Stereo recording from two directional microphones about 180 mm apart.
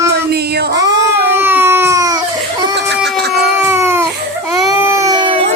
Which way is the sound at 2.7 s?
65° right (ahead or behind).